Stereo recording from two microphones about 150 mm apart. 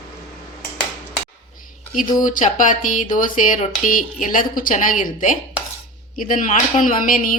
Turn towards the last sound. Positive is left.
turn(degrees=65)  # may be behind; listen again after turning